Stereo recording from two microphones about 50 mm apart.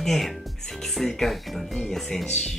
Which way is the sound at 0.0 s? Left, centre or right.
Centre.